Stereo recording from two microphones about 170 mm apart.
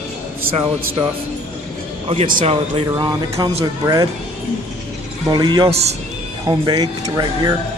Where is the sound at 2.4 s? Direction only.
30° right (ahead or behind).